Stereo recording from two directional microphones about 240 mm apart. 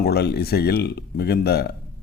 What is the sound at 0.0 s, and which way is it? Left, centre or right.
Speech, left.